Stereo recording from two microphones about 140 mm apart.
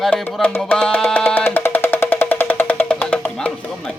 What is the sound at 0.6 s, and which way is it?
Music, 5° left (ahead or behind).